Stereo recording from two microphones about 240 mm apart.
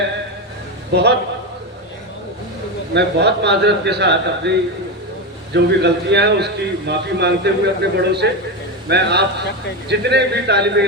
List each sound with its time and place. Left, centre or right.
0.9 s a man's voice: right
2.9 s a man's voice: right
5.5 s a man's voice: right